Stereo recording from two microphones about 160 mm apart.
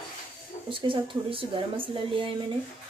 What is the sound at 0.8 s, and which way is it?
Speech, 35° right (ahead or behind).